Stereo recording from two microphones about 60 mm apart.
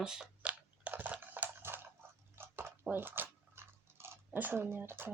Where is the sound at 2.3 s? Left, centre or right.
Right.